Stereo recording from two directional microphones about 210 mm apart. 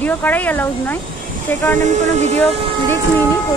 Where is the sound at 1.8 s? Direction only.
35° right (ahead or behind).